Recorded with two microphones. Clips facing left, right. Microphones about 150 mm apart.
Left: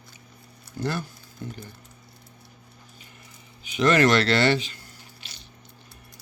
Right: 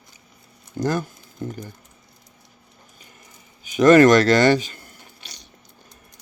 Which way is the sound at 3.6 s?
45° right (ahead or behind).